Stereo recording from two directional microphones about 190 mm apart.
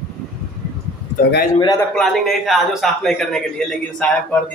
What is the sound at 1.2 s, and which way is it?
Speech, 50° left (ahead or behind).